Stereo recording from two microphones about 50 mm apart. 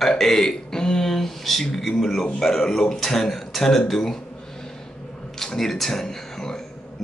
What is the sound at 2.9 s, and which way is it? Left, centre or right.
A man's voice, centre.